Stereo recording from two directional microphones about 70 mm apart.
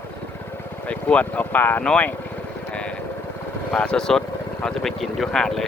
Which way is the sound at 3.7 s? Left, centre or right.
Centre.